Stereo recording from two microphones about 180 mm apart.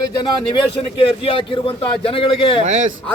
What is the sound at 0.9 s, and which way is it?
A man's voice, 30° left (ahead or behind).